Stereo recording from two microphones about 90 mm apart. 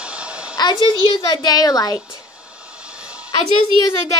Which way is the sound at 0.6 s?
50° left (ahead or behind).